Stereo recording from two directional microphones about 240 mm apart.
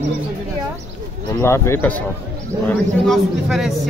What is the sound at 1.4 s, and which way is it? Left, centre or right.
A woman's voice, centre.